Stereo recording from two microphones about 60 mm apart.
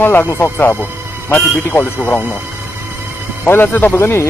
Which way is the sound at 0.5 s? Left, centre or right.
Left.